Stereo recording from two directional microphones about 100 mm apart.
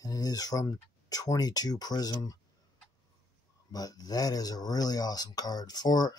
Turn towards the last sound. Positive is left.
turn(degrees=40)  # may be behind; listen again after turning